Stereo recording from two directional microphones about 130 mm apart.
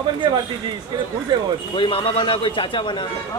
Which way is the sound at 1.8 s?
40° left (ahead or behind).